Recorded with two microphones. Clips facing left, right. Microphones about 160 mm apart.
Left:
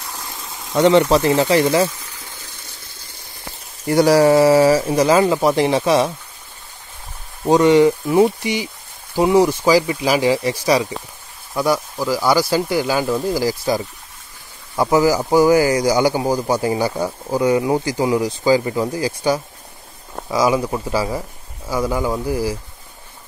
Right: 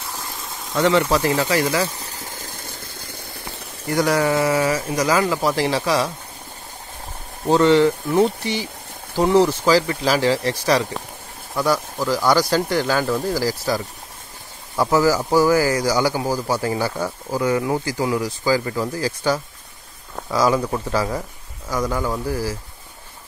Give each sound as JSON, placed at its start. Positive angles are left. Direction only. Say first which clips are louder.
{"t": 0.7, "sound": "speech", "louder": "left 5 dB", "side_deg": 25}
{"t": 2.0, "sound": "a sound", "louder": "right 4 dB", "side_deg": -35}
{"t": 3.9, "sound": "speech", "louder": "left 7 dB", "side_deg": 30}
{"t": 7.4, "sound": "speech", "louder": "left 3 dB", "side_deg": 15}